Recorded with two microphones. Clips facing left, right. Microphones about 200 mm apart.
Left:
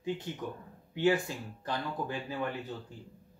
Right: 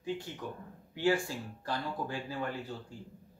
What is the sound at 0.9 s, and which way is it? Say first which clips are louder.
Speech: left 2 dB; 20° left (ahead or behind).